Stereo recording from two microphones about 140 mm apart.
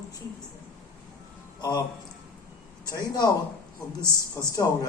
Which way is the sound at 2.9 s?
30° left (ahead or behind).